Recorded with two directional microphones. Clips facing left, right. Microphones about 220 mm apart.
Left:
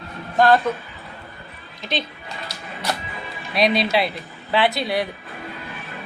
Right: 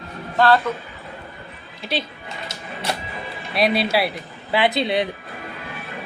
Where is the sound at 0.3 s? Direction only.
15° left (ahead or behind).